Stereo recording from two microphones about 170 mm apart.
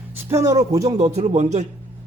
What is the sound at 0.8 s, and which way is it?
Speech, 40° right (ahead or behind).